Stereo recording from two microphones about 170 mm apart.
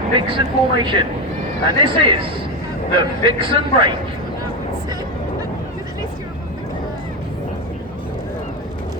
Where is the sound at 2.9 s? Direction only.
30° right (ahead or behind).